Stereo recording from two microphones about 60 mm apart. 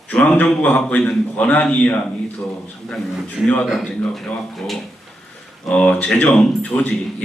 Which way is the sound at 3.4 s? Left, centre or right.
Left.